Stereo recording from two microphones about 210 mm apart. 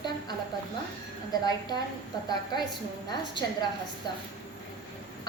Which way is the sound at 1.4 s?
20° left (ahead or behind).